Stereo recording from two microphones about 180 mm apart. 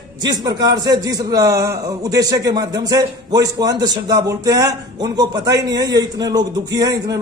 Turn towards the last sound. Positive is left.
turn(degrees=-20)  # may be behind; listen again after turning